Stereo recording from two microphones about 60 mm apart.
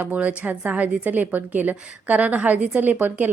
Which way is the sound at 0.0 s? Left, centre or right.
Right.